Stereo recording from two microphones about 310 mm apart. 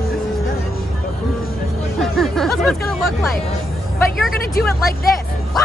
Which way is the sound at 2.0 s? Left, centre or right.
Centre.